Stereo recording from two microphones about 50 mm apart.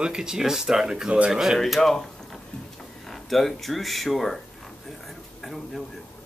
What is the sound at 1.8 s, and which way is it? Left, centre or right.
Speech, centre.